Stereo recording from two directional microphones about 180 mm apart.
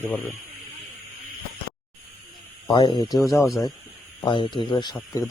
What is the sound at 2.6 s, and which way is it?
Speech, 25° left (ahead or behind).